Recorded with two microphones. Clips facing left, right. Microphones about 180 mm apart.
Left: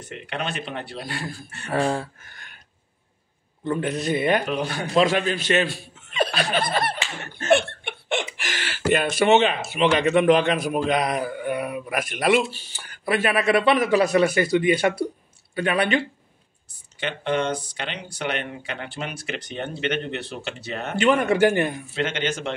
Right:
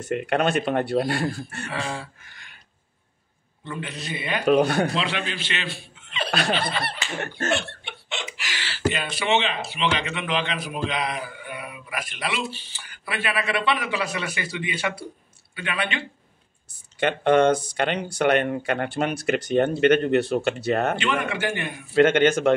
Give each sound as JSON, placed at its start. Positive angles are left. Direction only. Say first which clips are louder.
{"t": 0.0, "sound": "speech", "louder": "right 8 dB", "side_deg": -50}
{"t": 1.7, "sound": "speech", "louder": "left 9 dB", "side_deg": 45}
{"t": 3.6, "sound": "speech", "louder": "left 9 dB", "side_deg": 45}
{"t": 4.5, "sound": "speech", "louder": "right 8 dB", "side_deg": -60}
{"t": 4.9, "sound": "a man's voice", "louder": "left 8 dB", "side_deg": 45}
{"t": 7.4, "sound": "laughter", "louder": "left 9 dB", "side_deg": 55}
{"t": 8.4, "sound": "speech", "louder": "left 1 dB", "side_deg": 50}
{"t": 17.0, "sound": "speech", "louder": "right 7 dB", "side_deg": -50}
{"t": 21.0, "sound": "speech", "louder": "left 8 dB", "side_deg": 40}
{"t": 21.9, "sound": "speech", "louder": "right 13 dB", "side_deg": -50}